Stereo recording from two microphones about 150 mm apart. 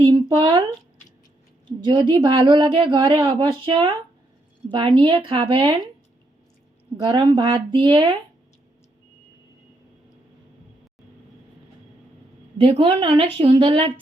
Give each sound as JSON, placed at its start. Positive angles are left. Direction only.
{"t": 0.0, "sound": "a sound", "side_deg": -30}
{"t": 1.6, "sound": "a woman's voice", "side_deg": -30}
{"t": 7.0, "sound": "a woman's voice", "side_deg": -30}
{"t": 12.5, "sound": "a woman's voice", "side_deg": -35}